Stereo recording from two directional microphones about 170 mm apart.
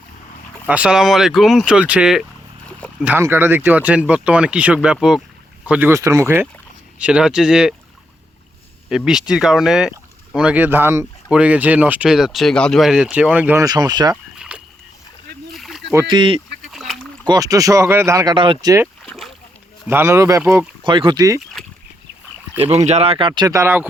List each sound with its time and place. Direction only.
0.7 s speech: 5° right (ahead or behind)
8.9 s speech: centre (ahead or behind)
13.7 s speech: 25° right (ahead or behind)
14.3 s rowboat: 5° right (ahead or behind)
16.0 s speech: 30° right (ahead or behind)
16.6 s rowboat: centre (ahead or behind)
17.2 s speech: 20° right (ahead or behind)
19.9 s speech: 15° right (ahead or behind)
20.8 s speech: 30° right (ahead or behind)
22.9 s speech: 35° right (ahead or behind); by 23.9 s 10° right (ahead or behind)